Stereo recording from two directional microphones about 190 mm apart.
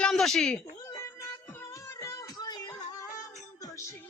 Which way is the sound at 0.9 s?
15° left (ahead or behind).